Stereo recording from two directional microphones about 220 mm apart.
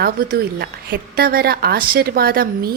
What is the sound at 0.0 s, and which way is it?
A woman's voice, 45° right (ahead or behind).